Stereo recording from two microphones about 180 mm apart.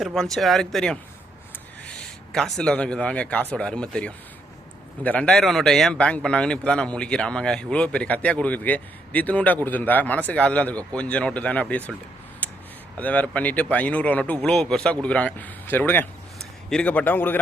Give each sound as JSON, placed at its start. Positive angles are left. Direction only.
{"t": 0.0, "sound": "a man's voice", "side_deg": 0}
{"t": 12.4, "sound": "a sound", "side_deg": 10}
{"t": 13.0, "sound": "speech", "side_deg": 10}